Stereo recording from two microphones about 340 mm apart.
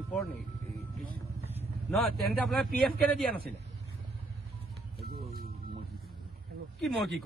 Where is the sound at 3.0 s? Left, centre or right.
Centre.